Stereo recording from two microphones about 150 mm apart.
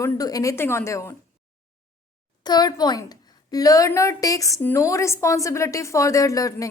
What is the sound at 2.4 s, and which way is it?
A woman's voice, 25° left (ahead or behind).